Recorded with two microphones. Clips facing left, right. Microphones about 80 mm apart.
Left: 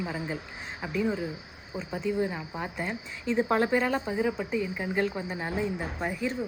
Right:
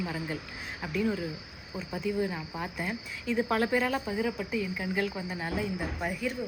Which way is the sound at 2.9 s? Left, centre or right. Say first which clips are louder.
Left 2 dB; left.